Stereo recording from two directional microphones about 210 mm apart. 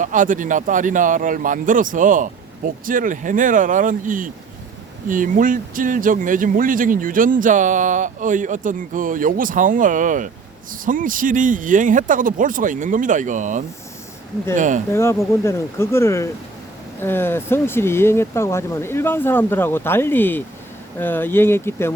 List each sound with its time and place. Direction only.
0.0 s speech: 40° right (ahead or behind)
14.9 s speech: 15° left (ahead or behind)